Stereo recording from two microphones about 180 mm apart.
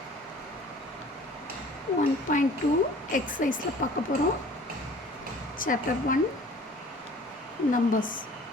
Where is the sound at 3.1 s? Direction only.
50° left (ahead or behind).